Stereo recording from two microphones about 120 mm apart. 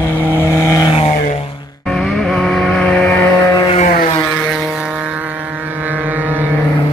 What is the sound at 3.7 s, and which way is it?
Vehicle, 90° left.